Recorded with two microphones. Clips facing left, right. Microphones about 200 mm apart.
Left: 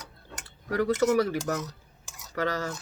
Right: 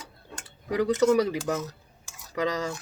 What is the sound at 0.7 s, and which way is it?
Speech, 15° right (ahead or behind).